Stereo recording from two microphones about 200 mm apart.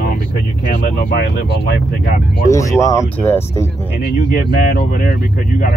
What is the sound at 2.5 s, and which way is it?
Speech, 15° left (ahead or behind).